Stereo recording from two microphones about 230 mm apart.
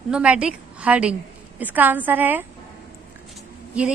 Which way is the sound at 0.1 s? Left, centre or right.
Centre.